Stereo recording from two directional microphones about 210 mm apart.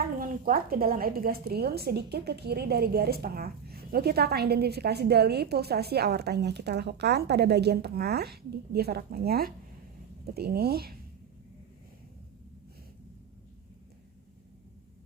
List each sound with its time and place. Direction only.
0.2 s a woman's voice: 45° right (ahead or behind)